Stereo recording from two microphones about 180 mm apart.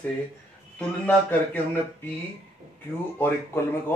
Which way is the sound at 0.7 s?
10° left (ahead or behind).